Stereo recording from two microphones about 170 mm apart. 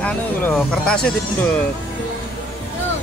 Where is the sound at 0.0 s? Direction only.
5° left (ahead or behind).